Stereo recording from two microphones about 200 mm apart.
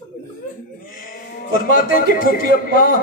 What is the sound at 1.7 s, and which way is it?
Speech, 45° left (ahead or behind).